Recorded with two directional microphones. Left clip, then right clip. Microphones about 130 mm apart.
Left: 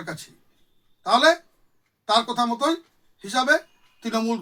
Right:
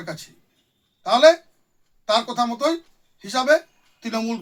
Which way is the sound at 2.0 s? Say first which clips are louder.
Even; 5° right (ahead or behind).